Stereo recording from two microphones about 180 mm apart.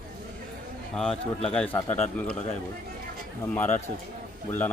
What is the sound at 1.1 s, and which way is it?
Speech, 35° left (ahead or behind).